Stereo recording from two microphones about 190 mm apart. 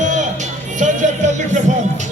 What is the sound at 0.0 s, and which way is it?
Music, 40° right (ahead or behind).